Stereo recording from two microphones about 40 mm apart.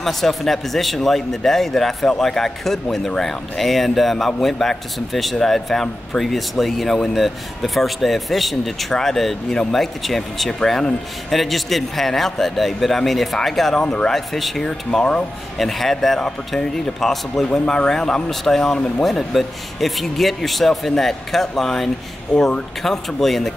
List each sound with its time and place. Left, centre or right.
0.0 s a man's voice: centre
10.6 s a man's voice: centre
11.2 s speech: centre
13.7 s a man's voice: centre
14.1 s speech: centre
14.6 s a man's voice: centre
15.5 s a man's voice: centre